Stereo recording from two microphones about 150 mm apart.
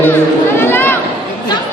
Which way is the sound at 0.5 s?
15° left (ahead or behind).